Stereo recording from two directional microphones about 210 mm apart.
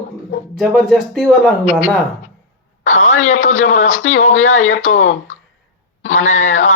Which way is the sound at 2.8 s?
35° left (ahead or behind).